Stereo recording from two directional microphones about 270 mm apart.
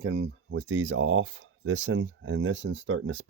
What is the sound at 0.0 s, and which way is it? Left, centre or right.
Speech, right.